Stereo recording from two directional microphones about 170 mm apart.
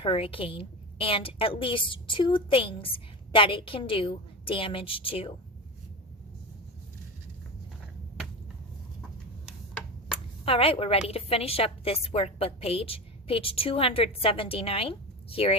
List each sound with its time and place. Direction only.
0.0 s a woman's voice: 35° left (ahead or behind)
10.4 s a woman's voice: 35° left (ahead or behind)